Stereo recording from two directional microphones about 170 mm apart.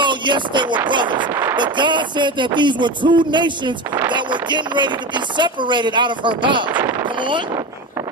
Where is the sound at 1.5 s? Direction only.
25° right (ahead or behind).